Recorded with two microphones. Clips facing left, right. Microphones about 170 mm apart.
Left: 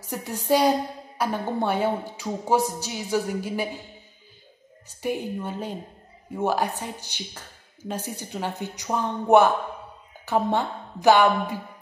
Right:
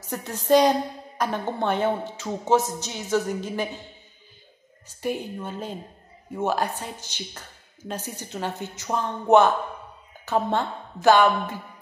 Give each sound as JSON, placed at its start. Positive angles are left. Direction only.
{"t": 0.0, "sound": "a woman's voice", "side_deg": 15}
{"t": 5.0, "sound": "a woman's voice", "side_deg": 10}